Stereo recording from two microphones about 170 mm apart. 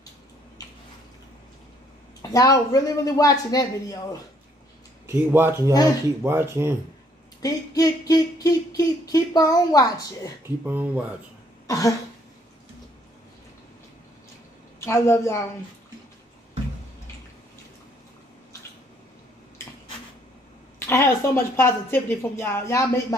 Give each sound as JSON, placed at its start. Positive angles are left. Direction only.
{"t": 2.2, "sound": "speech", "side_deg": 20}
{"t": 5.3, "sound": "speech", "side_deg": -15}
{"t": 7.4, "sound": "speech", "side_deg": 20}
{"t": 10.6, "sound": "speech", "side_deg": -10}
{"t": 11.6, "sound": "cough", "side_deg": 20}
{"t": 14.9, "sound": "a woman's voice", "side_deg": 15}
{"t": 20.8, "sound": "a woman's voice", "side_deg": 15}